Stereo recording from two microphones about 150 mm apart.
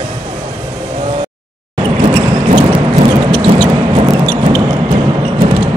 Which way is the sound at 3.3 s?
30° right (ahead or behind).